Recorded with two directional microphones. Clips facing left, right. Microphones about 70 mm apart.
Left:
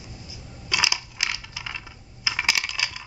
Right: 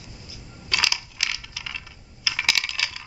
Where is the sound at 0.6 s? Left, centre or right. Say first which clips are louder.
Left 1 dB; centre.